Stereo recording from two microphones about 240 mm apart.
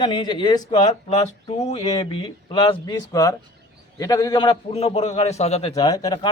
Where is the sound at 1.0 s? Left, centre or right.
Left.